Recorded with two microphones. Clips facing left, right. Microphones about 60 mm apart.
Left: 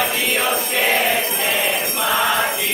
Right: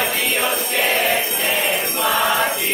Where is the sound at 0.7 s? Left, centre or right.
Centre.